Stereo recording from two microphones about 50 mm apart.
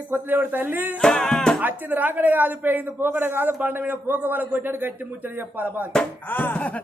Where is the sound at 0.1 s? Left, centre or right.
Right.